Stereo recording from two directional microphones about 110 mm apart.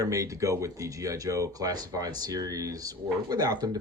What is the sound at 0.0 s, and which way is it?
Speech, 30° right (ahead or behind).